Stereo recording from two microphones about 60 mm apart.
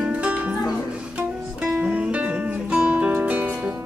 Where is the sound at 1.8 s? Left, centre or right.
Centre.